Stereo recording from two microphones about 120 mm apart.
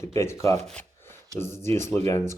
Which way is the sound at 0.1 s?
20° left (ahead or behind).